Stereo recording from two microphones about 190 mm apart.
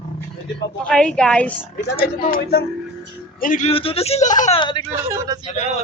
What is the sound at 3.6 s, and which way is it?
Speech, 30° left (ahead or behind).